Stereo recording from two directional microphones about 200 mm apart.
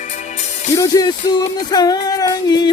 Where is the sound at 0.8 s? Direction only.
15° left (ahead or behind).